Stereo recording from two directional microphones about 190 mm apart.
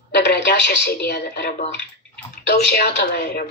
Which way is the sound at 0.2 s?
55° left (ahead or behind).